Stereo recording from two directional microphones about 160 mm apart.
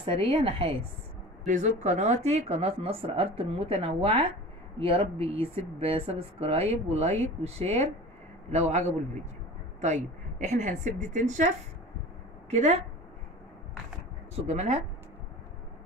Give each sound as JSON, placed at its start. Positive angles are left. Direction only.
{"t": 0.0, "sound": "speech", "side_deg": -35}
{"t": 1.4, "sound": "a woman's voice", "side_deg": -50}
{"t": 14.3, "sound": "a woman's voice", "side_deg": -45}